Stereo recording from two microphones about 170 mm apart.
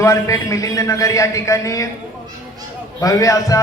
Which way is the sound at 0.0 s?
20° left (ahead or behind).